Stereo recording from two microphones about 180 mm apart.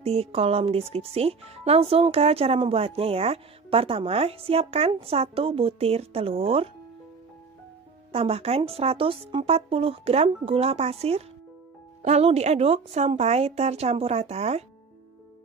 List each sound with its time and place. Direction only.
0.0 s speech: 35° right (ahead or behind)
8.1 s speech: 35° right (ahead or behind)